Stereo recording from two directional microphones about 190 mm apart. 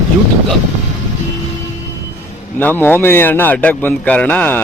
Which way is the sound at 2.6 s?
10° left (ahead or behind).